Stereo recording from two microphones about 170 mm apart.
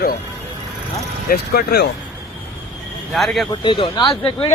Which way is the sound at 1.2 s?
70° left (ahead or behind).